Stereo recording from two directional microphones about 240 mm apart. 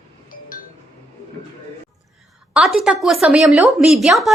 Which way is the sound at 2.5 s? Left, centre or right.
Centre.